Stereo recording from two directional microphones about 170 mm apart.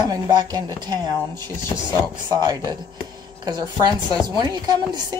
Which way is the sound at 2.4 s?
25° right (ahead or behind).